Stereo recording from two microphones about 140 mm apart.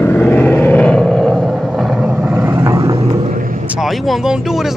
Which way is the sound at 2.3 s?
15° right (ahead or behind).